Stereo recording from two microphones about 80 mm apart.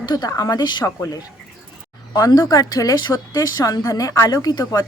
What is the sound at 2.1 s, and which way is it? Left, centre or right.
Speech, left.